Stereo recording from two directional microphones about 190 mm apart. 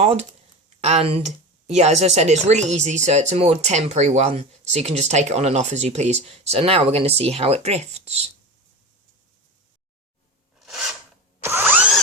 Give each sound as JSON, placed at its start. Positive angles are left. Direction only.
{"t": 0.0, "sound": "speech", "side_deg": -35}
{"t": 10.6, "sound": "filing", "side_deg": 0}
{"t": 11.4, "sound": "drill", "side_deg": -10}